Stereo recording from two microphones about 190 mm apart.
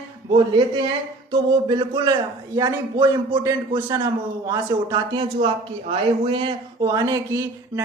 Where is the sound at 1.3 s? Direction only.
25° right (ahead or behind).